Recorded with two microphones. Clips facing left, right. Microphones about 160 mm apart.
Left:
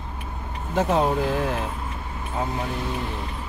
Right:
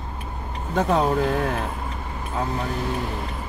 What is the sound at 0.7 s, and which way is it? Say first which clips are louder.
Speech: right 1 dB; 5° left (ahead or behind).